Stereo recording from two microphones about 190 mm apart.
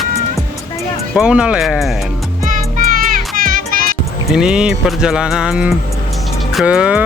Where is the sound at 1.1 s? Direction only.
5° right (ahead or behind).